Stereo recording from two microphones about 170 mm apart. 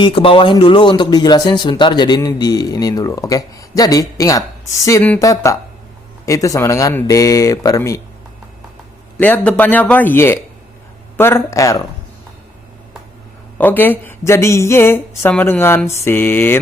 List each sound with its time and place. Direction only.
0.0 s speech: 30° left (ahead or behind)
9.2 s speech: 10° left (ahead or behind)
13.6 s speech: 10° left (ahead or behind)